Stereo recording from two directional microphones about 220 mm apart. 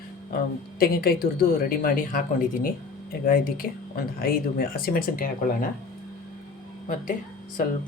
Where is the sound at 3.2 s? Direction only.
40° left (ahead or behind).